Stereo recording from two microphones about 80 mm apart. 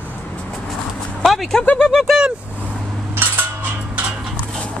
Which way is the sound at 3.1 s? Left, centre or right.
Right.